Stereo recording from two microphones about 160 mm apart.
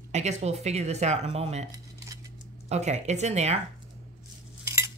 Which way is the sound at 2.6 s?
45° right (ahead or behind).